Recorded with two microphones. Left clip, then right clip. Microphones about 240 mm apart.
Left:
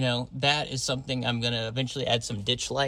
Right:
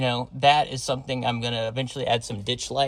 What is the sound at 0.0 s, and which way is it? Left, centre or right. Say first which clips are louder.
Speech: right 6 dB; centre.